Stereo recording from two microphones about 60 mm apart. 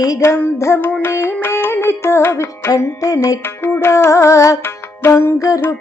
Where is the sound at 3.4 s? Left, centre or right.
Left.